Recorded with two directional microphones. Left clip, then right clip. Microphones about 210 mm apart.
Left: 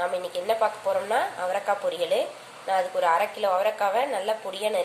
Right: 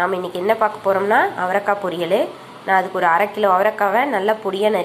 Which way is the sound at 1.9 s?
35° right (ahead or behind).